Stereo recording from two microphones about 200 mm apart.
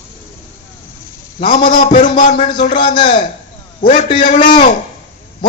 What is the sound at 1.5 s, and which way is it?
A man's voice, 45° left (ahead or behind).